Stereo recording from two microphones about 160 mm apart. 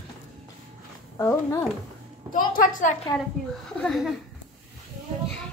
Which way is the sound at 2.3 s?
60° left (ahead or behind).